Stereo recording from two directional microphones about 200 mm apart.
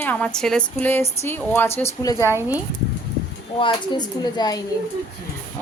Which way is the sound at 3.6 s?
25° left (ahead or behind).